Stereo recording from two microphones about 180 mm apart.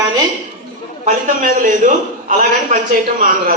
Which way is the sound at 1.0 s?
50° right (ahead or behind).